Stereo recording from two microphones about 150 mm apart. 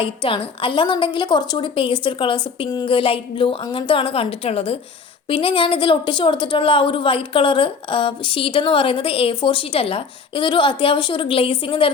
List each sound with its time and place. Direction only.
0.0 s a woman's voice: 35° left (ahead or behind)